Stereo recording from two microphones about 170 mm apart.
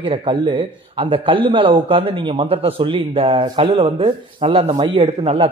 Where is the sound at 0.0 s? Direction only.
30° right (ahead or behind).